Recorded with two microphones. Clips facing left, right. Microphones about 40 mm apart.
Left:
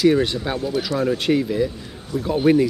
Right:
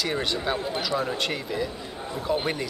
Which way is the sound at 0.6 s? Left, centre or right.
Right.